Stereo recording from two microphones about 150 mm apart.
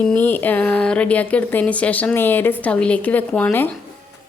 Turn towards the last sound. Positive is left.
turn(degrees=10)  # may be behind; listen again after turning